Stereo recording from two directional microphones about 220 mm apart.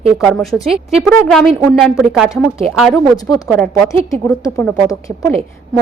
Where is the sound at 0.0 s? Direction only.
Centre (ahead or behind).